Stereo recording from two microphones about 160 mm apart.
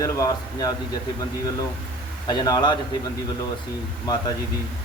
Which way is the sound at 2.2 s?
25° left (ahead or behind).